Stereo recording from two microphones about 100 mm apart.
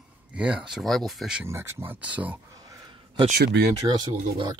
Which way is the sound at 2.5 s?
40° right (ahead or behind).